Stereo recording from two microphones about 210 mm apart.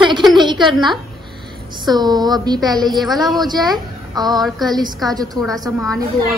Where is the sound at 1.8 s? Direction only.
20° right (ahead or behind).